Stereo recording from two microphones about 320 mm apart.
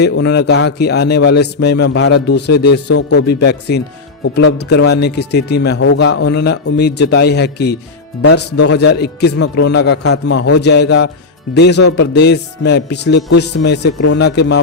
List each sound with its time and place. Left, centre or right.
0.0 s a man's voice: left